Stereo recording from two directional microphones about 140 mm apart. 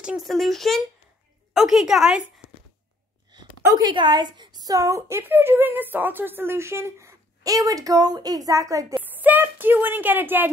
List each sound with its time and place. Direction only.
0.0 s speech: 5° right (ahead or behind)
3.3 s a woman's voice: 30° right (ahead or behind); by 10.5 s 15° right (ahead or behind)